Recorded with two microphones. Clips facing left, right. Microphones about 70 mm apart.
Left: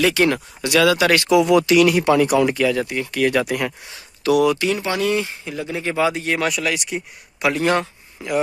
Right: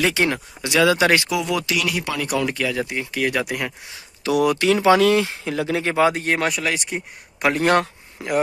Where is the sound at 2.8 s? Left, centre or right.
Centre.